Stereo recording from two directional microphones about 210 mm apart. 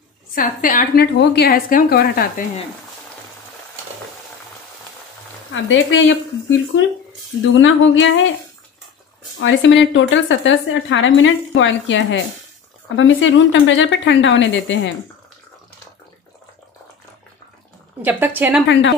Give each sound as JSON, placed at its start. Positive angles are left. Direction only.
{"t": 0.3, "sound": "a woman's voice", "side_deg": 40}
{"t": 1.0, "sound": "speech", "side_deg": 55}
{"t": 5.5, "sound": "a woman's voice", "side_deg": 60}
{"t": 7.5, "sound": "a woman's voice", "side_deg": 65}
{"t": 9.4, "sound": "a woman's voice", "side_deg": 65}
{"t": 18.0, "sound": "a woman's voice", "side_deg": -10}
{"t": 18.7, "sound": "a woman's voice", "side_deg": 60}